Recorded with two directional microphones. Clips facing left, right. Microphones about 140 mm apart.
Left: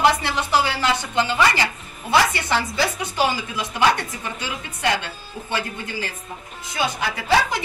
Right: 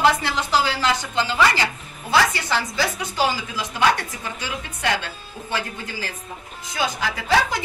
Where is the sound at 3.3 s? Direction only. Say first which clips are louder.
Left 1 dB; centre (ahead or behind).